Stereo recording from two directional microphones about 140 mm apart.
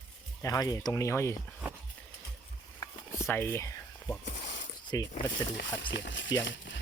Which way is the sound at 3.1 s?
20° left (ahead or behind).